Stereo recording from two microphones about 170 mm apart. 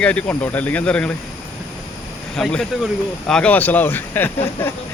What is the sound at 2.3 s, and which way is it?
Speech, 5° left (ahead or behind).